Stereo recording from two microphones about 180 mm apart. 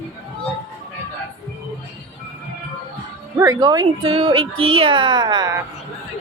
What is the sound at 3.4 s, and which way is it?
Speech, 20° right (ahead or behind).